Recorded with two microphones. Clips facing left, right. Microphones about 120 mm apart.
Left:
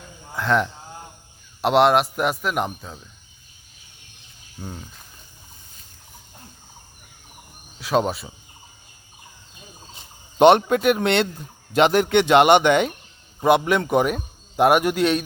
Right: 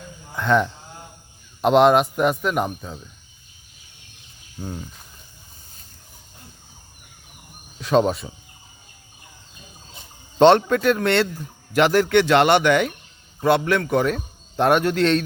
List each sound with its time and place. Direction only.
0.3 s a man's voice: centre (ahead or behind)
4.6 s a man's voice: centre (ahead or behind)
7.8 s a man's voice: 5° left (ahead or behind)
10.3 s a man's voice: 15° left (ahead or behind)